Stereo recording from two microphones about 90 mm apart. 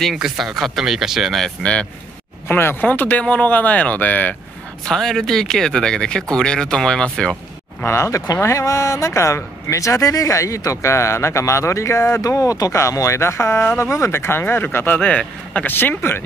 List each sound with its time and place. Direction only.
0.0 s speech: 5° right (ahead or behind)
1.6 s speech: 10° left (ahead or behind)
2.4 s speech: 25° left (ahead or behind)
4.8 s speech: 5° left (ahead or behind)
7.8 s speech: 30° left (ahead or behind)